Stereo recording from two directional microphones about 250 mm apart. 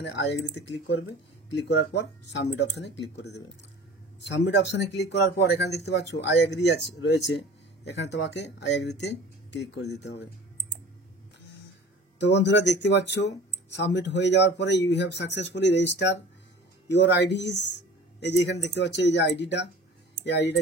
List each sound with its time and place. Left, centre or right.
0.7 s speech: left
12.2 s speech: left